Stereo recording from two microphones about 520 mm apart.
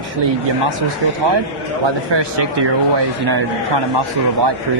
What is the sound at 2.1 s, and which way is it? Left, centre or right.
A man's voice, right.